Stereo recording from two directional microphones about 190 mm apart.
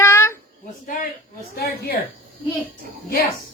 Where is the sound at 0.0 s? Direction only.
15° left (ahead or behind).